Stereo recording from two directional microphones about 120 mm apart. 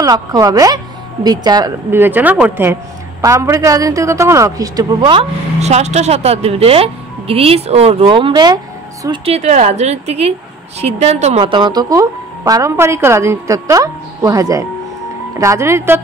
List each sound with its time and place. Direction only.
0.0 s speech: 30° right (ahead or behind)
1.9 s speech: 15° right (ahead or behind)
5.6 s speech: 65° right (ahead or behind); by 8.5 s 40° right (ahead or behind)
9.2 s speech: 65° right (ahead or behind)
11.4 s speech: 40° right (ahead or behind); by 16.0 s 20° right (ahead or behind)